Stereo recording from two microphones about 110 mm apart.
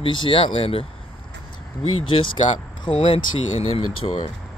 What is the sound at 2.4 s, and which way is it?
Speech, 35° left (ahead or behind).